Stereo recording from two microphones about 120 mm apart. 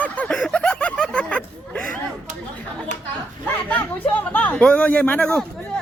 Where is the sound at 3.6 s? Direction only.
15° left (ahead or behind).